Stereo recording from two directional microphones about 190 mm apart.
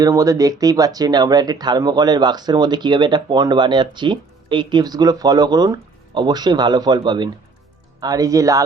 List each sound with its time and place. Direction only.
0.0 s speech: 15° right (ahead or behind)